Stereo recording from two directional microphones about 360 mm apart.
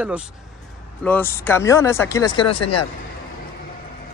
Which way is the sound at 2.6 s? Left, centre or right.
Left.